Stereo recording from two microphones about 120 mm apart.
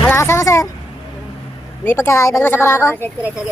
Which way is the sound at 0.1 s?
25° left (ahead or behind).